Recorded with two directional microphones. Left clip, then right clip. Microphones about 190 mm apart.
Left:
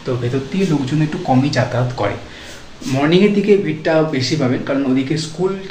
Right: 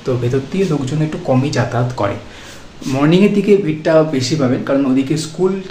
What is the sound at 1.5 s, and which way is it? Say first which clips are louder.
Speech: even; 20° right (ahead or behind).